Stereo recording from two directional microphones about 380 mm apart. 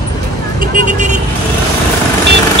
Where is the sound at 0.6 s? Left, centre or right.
Centre.